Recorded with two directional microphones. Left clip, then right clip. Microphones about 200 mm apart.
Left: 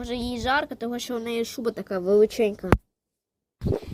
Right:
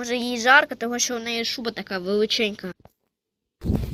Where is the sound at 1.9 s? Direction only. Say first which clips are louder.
Left 4 dB; 5° right (ahead or behind).